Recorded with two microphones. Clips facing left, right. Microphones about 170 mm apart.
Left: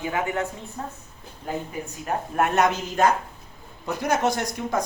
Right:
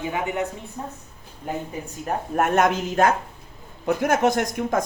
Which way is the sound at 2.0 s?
45° right (ahead or behind).